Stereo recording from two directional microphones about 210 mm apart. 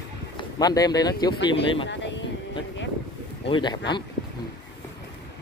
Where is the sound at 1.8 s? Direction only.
60° left (ahead or behind).